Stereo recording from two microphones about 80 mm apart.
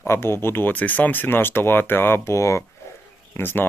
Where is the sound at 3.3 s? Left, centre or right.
Left.